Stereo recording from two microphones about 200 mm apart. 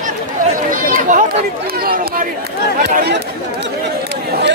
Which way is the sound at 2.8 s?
50° right (ahead or behind).